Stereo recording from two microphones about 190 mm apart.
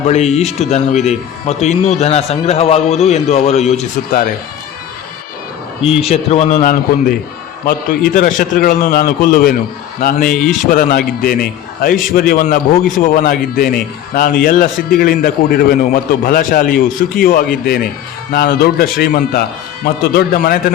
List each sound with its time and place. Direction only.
0.1 s a man's voice: 35° left (ahead or behind)
4.1 s speech: 50° left (ahead or behind)
6.0 s a man's voice: 30° left (ahead or behind)
7.6 s speech: 50° left (ahead or behind)